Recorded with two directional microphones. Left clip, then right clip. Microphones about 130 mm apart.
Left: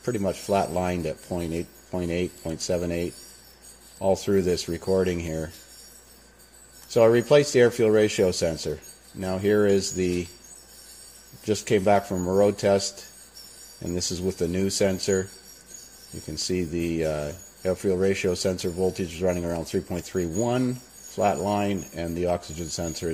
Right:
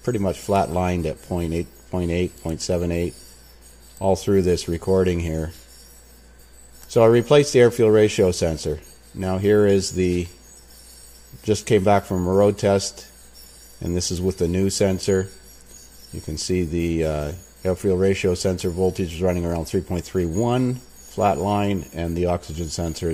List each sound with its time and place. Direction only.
0.0 s speech: 30° right (ahead or behind)
6.9 s speech: 30° right (ahead or behind)
11.4 s speech: 30° right (ahead or behind)
16.3 s speech: 30° right (ahead or behind)